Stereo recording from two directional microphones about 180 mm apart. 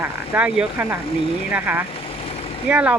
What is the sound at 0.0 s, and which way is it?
Speech, 5° right (ahead or behind).